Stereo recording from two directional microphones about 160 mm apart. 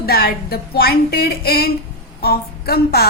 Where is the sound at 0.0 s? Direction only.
75° left (ahead or behind).